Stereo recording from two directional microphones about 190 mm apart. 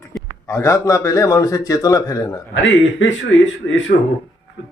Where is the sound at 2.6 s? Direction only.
75° left (ahead or behind).